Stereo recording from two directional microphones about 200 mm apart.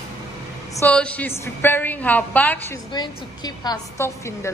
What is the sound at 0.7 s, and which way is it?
A woman's voice, 10° left (ahead or behind).